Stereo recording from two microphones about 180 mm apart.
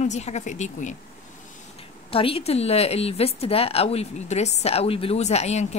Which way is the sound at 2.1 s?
30° left (ahead or behind).